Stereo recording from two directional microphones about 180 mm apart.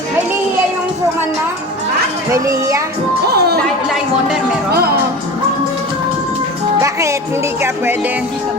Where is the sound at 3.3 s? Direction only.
60° right (ahead or behind).